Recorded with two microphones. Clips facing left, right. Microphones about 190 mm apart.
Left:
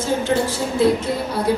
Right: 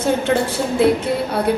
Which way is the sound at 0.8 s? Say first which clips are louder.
Right 1 dB; 60° right (ahead or behind).